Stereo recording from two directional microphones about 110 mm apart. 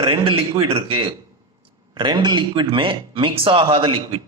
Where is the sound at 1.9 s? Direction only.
45° right (ahead or behind).